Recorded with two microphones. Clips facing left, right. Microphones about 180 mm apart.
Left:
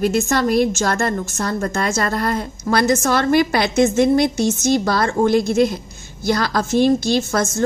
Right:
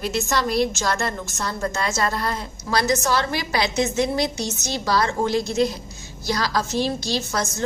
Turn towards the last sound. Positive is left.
turn(degrees=50)  # may be behind; listen again after turning